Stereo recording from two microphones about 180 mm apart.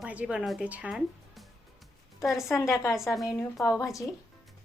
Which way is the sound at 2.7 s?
15° left (ahead or behind).